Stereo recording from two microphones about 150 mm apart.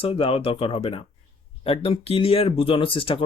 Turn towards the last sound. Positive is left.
turn(degrees=35)  # may be behind; listen again after turning